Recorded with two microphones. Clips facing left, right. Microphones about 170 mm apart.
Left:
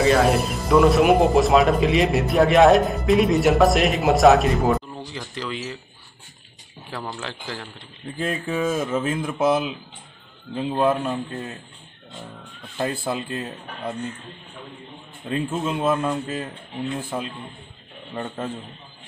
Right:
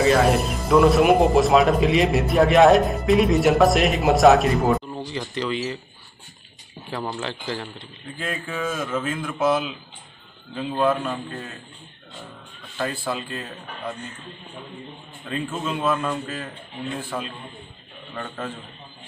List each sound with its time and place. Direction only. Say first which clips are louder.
0.0 s speech: even; centre (ahead or behind)
6.9 s speech: right 3 dB; centre (ahead or behind)
8.2 s speech: left 4 dB; 25° left (ahead or behind)
10.7 s speech: left 1 dB; 25° left (ahead or behind)
12.7 s speech: left 2 dB; 20° left (ahead or behind)
15.2 s speech: left 3 dB; 20° left (ahead or behind)